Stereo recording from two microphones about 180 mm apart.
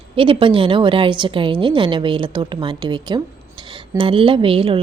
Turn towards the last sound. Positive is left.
turn(degrees=-30)  # may be behind; listen again after turning